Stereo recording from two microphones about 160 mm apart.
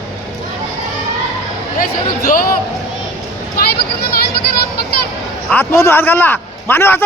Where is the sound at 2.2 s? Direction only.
60° left (ahead or behind).